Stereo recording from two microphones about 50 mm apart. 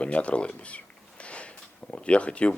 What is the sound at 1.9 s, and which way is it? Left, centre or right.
Speech, left.